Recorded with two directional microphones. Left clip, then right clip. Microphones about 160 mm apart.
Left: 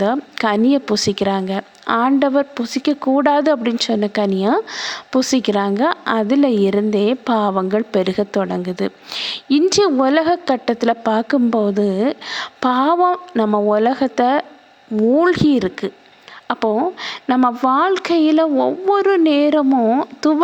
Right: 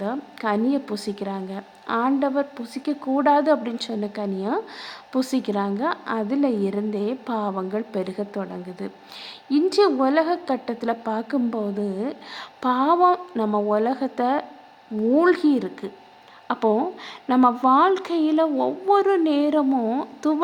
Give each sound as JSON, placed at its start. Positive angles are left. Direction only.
{"t": 0.0, "sound": "a woman's voice", "side_deg": 35}